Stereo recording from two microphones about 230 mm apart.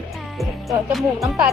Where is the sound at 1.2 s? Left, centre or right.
Centre.